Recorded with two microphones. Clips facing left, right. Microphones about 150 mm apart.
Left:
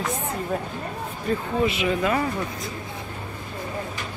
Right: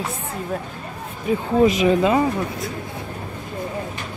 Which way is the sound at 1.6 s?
35° right (ahead or behind).